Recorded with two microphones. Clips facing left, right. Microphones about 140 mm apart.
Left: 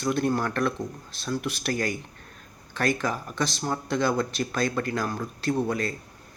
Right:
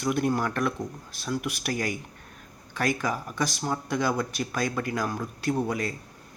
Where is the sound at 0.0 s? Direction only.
15° right (ahead or behind).